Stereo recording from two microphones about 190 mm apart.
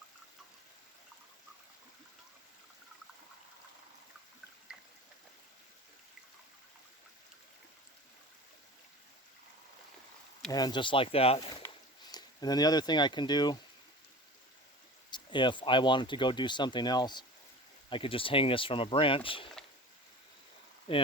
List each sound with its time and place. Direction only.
4.7 s water: 5° right (ahead or behind)
10.5 s speech: 20° left (ahead or behind)
11.6 s a sound: 20° left (ahead or behind)
15.1 s speech: 25° left (ahead or behind)
20.9 s speech: 25° left (ahead or behind)